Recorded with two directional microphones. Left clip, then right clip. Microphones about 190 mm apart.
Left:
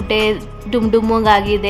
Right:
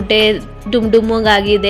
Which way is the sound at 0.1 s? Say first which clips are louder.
Right 4 dB; 10° right (ahead or behind).